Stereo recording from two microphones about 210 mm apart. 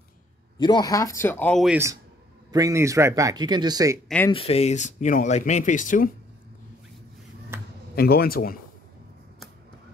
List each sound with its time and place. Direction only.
0.6 s speech: 20° left (ahead or behind); by 1.8 s centre (ahead or behind)
2.5 s speech: 15° right (ahead or behind)
4.3 s speech: 30° left (ahead or behind)
7.9 s a man's voice: 45° left (ahead or behind)